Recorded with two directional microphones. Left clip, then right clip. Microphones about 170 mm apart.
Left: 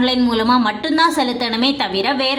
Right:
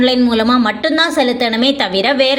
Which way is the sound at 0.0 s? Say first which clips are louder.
Right 4 dB; 20° right (ahead or behind).